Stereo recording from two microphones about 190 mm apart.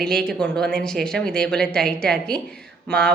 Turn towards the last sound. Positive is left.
turn(degrees=5)  # may be behind; listen again after turning